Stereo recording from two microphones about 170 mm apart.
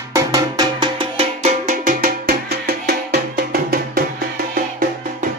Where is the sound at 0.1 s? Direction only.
20° right (ahead or behind); by 4.0 s 65° right (ahead or behind).